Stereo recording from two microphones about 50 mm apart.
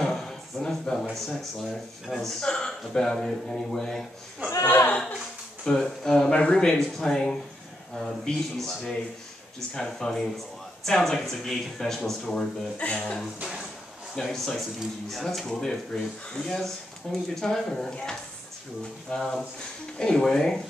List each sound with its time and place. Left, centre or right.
0.0 s a sound: centre
1.1 s speech: centre
2.4 s speech: centre
4.6 s a sound: left
5.6 s speech: centre
12.7 s speech: left
14.1 s speech: centre
19.1 s speech: centre